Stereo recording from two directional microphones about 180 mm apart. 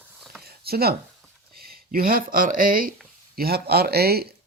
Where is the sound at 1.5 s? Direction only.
55° right (ahead or behind).